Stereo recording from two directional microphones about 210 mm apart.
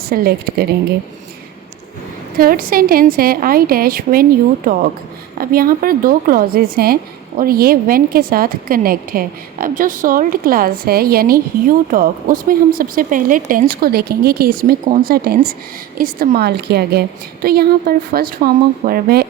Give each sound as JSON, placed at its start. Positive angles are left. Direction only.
{"t": 0.0, "sound": "a woman's voice", "side_deg": -45}
{"t": 2.4, "sound": "a woman's voice", "side_deg": -45}